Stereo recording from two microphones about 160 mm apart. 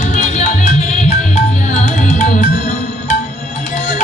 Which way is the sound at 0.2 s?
45° left (ahead or behind).